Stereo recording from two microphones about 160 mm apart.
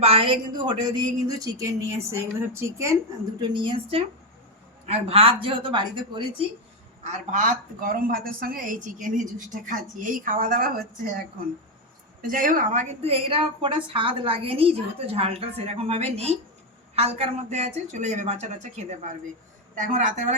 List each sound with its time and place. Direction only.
0.0 s a woman's voice: 35° right (ahead or behind); by 3.0 s 20° right (ahead or behind)
3.4 s a woman's voice: 30° right (ahead or behind)
7.0 s a woman's voice: 50° right (ahead or behind)
12.3 s a woman's voice: 55° right (ahead or behind)